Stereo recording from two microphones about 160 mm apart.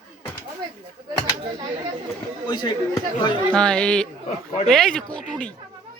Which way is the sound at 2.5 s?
25° left (ahead or behind).